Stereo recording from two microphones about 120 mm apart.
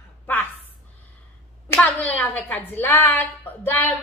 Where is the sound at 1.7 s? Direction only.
15° left (ahead or behind).